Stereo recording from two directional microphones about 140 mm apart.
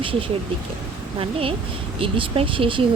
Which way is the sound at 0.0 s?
40° right (ahead or behind).